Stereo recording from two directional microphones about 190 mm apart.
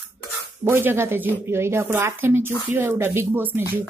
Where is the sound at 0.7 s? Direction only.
10° right (ahead or behind).